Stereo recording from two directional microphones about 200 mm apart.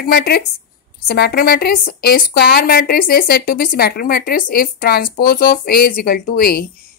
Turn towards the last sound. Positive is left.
turn(degrees=50)  # may be behind; listen again after turning